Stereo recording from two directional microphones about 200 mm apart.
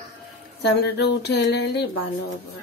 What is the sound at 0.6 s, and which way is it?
Speech, 55° left (ahead or behind).